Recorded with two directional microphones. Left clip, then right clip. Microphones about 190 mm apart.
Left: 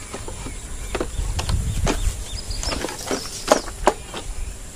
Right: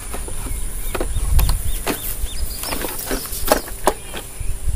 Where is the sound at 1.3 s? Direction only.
10° left (ahead or behind).